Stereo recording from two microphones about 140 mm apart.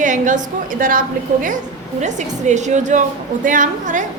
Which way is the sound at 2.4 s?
55° right (ahead or behind).